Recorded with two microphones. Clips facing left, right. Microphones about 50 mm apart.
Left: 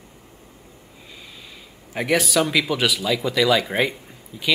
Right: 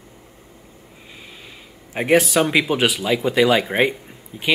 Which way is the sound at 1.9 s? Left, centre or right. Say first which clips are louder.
Right 4 dB; right.